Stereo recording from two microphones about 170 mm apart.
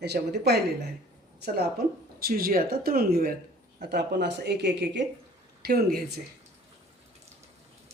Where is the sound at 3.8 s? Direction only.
80° right.